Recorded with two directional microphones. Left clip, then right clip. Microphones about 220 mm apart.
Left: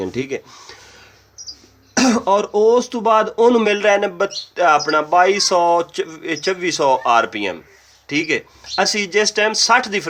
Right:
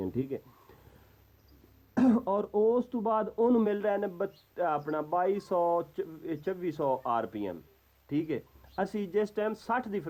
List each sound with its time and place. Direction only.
0.0 s speech: 10° left (ahead or behind)
2.0 s speech: 5° left (ahead or behind)
2.5 s speech: 35° left (ahead or behind)
2.9 s speech: 10° left (ahead or behind)